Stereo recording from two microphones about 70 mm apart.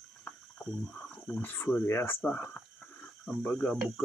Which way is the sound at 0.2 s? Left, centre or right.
Centre.